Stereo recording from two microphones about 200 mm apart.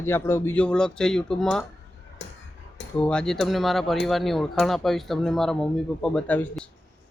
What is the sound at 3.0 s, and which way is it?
Speech, 5° left (ahead or behind).